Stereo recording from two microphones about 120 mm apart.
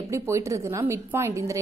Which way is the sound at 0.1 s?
25° right (ahead or behind).